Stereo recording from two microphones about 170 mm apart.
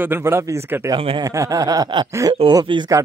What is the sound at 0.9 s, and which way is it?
Speech, 30° right (ahead or behind).